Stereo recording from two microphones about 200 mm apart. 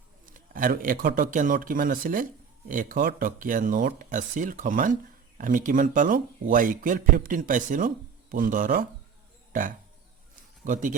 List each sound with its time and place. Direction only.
0.3 s a man's voice: 45° right (ahead or behind)